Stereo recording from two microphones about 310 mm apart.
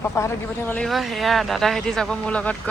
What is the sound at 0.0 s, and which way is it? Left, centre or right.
Speech, centre.